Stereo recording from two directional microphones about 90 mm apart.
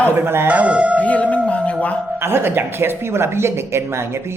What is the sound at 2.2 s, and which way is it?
Speech, 25° right (ahead or behind).